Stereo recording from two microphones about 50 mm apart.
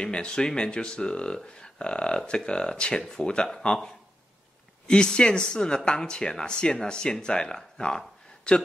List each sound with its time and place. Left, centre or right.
0.0 s speech: centre